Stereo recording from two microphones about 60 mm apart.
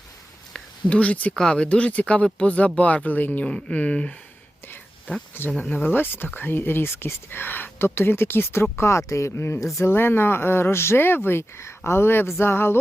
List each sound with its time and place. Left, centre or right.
0.5 s a sound: left
1.3 s speech: centre; by 3.4 s left
3.4 s speech: centre
5.4 s speech: left